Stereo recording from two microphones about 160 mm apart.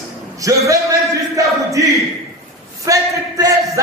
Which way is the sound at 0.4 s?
20° right (ahead or behind).